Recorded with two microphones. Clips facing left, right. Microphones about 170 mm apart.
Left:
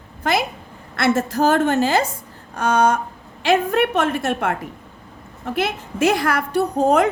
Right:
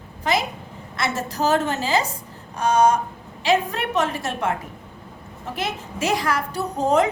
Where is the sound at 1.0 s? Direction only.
55° left (ahead or behind).